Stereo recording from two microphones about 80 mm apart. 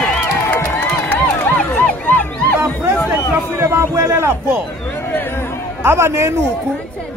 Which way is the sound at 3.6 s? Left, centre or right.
Right.